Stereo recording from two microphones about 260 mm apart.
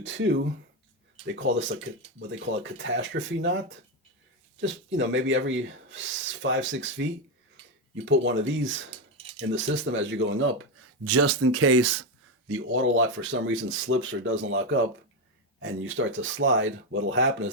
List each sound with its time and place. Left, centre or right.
0.0 s speech: right
4.6 s speech: right
11.0 s speech: right
12.5 s speech: right